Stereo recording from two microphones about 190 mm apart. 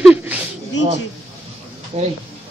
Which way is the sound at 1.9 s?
35° right (ahead or behind).